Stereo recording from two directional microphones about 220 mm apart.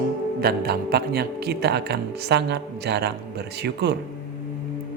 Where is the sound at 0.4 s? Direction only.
45° right (ahead or behind).